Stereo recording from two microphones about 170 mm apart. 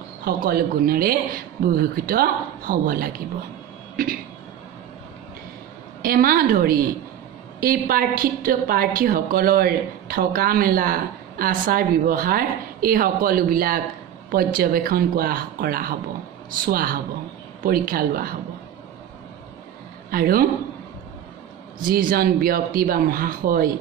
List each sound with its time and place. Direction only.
0.2 s a woman's voice: 60° right (ahead or behind)
6.0 s a woman's voice: 55° right (ahead or behind)
20.1 s a man's voice: 60° right (ahead or behind)
21.8 s a woman's voice: 60° right (ahead or behind)